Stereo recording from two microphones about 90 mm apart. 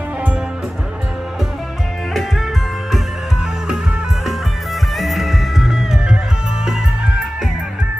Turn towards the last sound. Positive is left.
turn(degrees=-5)  # may be behind; listen again after turning